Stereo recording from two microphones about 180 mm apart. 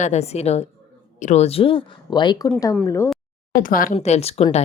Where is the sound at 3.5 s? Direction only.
50° left (ahead or behind); by 4.6 s 35° left (ahead or behind).